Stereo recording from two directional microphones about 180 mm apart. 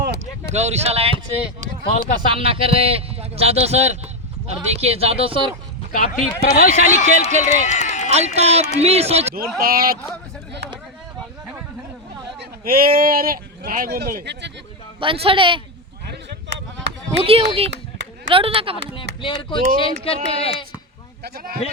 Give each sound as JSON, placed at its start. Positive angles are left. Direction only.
{"t": 0.0, "sound": "a sound", "side_deg": -65}
{"t": 0.5, "sound": "a man's voice", "side_deg": -40}
{"t": 2.3, "sound": "a man's voice", "side_deg": -30}
{"t": 5.9, "sound": "speech", "side_deg": 45}
{"t": 8.1, "sound": "a man's voice", "side_deg": -35}
{"t": 9.6, "sound": "speech", "side_deg": -55}
{"t": 12.4, "sound": "speech", "side_deg": -55}
{"t": 15.0, "sound": "a man's voice", "side_deg": -30}
{"t": 16.0, "sound": "a sound", "side_deg": -70}
{"t": 17.2, "sound": "a man's voice", "side_deg": -35}
{"t": 19.2, "sound": "speech", "side_deg": 25}
{"t": 21.2, "sound": "speech", "side_deg": -60}